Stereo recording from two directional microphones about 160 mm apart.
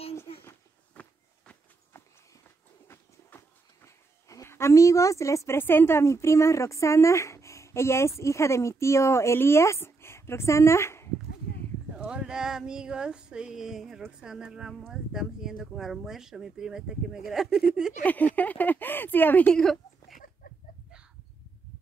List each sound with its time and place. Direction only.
0.4 s walk: 10° left (ahead or behind)
2.9 s speech: 15° left (ahead or behind)
11.9 s female singing: 5° right (ahead or behind)
18.0 s speech: 10° left (ahead or behind)